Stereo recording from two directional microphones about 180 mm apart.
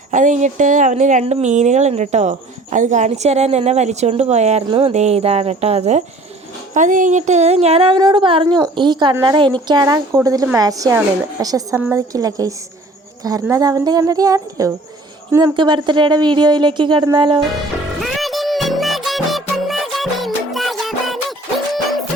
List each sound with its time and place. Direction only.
0.1 s a woman's voice: 45° right (ahead or behind); by 15.5 s 15° right (ahead or behind)
15.5 s a woman's voice: 25° right (ahead or behind)
18.0 s music: centre (ahead or behind)